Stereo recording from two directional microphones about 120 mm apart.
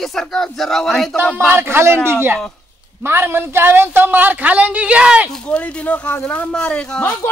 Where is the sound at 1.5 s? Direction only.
20° right (ahead or behind).